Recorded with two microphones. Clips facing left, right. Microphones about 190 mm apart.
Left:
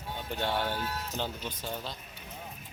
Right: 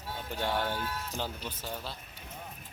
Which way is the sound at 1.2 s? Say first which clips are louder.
Left 2 dB; 5° right (ahead or behind).